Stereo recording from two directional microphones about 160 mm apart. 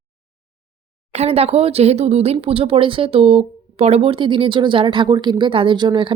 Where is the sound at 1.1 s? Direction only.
40° right (ahead or behind).